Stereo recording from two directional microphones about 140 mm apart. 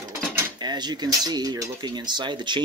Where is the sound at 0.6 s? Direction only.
30° right (ahead or behind).